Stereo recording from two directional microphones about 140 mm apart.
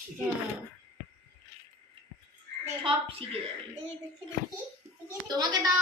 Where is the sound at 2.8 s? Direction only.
40° right (ahead or behind).